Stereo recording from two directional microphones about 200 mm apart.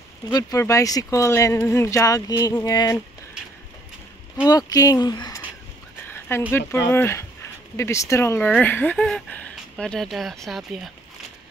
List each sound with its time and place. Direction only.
0.3 s speech: 20° left (ahead or behind)
4.5 s speech: 20° left (ahead or behind)
6.0 s a sound: 10° left (ahead or behind)
6.9 s speech: 10° left (ahead or behind)